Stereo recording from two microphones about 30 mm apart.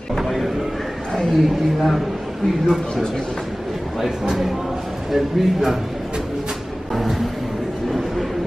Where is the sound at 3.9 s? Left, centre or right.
Centre.